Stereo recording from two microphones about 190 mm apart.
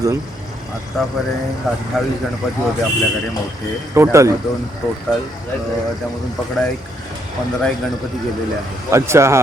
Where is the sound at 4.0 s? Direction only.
15° right (ahead or behind).